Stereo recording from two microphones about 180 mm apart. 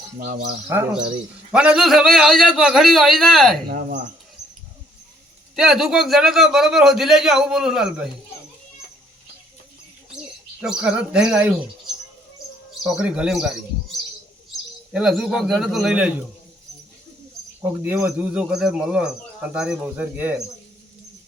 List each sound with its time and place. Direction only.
0.7 s a man's voice: 15° right (ahead or behind)
3.7 s speech: 50° right (ahead or behind)
5.5 s a man's voice: centre (ahead or behind)
10.6 s a man's voice: 5° right (ahead or behind)
12.8 s a man's voice: 5° right (ahead or behind)
14.5 s speech: centre (ahead or behind)
17.8 s a man's voice: 10° right (ahead or behind)